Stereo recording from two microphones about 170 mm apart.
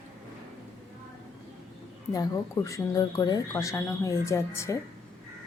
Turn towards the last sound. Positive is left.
turn(degrees=15)  # may be behind; listen again after turning